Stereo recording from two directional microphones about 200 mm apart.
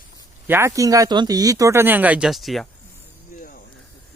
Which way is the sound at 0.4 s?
10° right (ahead or behind).